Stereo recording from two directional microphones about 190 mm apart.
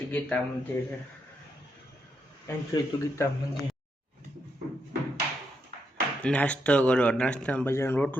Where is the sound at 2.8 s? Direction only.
20° left (ahead or behind).